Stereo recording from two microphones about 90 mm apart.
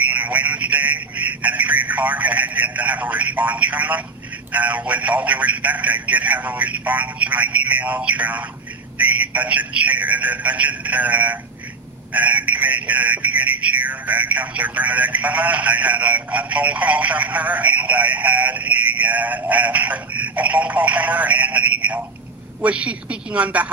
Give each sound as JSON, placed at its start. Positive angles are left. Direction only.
{"t": 0.1, "sound": "speech", "side_deg": -15}